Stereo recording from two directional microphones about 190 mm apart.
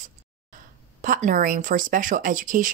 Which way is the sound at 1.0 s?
45° right (ahead or behind).